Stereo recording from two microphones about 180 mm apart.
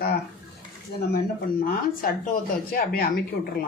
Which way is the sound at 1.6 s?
50° left (ahead or behind).